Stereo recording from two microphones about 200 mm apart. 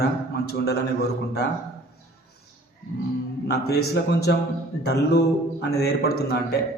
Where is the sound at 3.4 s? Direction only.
55° left (ahead or behind).